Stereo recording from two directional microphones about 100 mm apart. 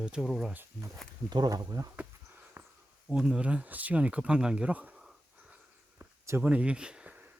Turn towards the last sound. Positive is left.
turn(degrees=-10)  # may be behind; listen again after turning